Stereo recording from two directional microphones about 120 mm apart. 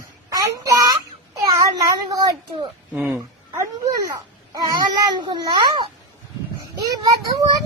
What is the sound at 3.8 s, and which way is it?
A child's voice, 30° right (ahead or behind).